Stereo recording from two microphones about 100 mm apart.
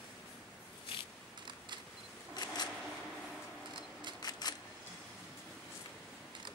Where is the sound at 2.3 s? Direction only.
45° left (ahead or behind).